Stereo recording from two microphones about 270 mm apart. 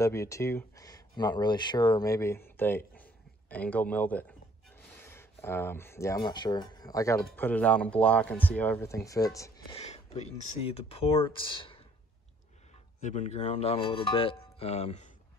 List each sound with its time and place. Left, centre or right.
0.0 s speech: centre
9.8 s speech: left
13.0 s speech: left